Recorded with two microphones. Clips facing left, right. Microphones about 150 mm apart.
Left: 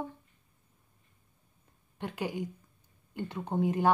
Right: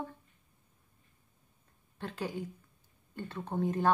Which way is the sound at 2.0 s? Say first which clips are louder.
Left 3 dB; 10° left (ahead or behind).